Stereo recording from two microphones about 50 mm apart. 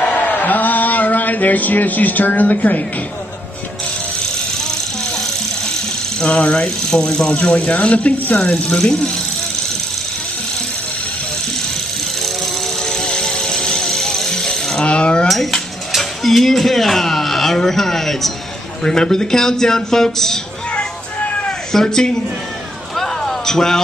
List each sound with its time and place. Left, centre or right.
0.0 s a sound: left
6.4 s speech: left
6.9 s a man's voice: centre
7.4 s speech: left
12.8 s music: centre
15.2 s cutlery: centre
18.9 s a man's voice: centre
20.7 s a sound: left
21.8 s a man's voice: centre
22.9 s a sound: centre